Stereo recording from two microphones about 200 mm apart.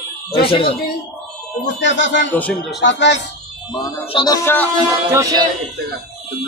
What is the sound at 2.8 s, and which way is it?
Speech, 60° left (ahead or behind).